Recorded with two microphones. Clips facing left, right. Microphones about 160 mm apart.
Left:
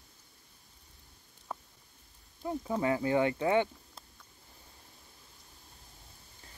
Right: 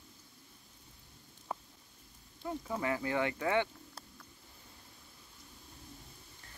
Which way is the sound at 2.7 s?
25° left (ahead or behind).